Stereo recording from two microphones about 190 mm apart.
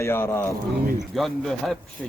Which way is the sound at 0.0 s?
15° left (ahead or behind).